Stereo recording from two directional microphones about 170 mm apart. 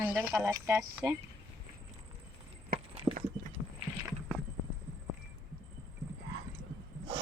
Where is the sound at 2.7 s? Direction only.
35° right (ahead or behind).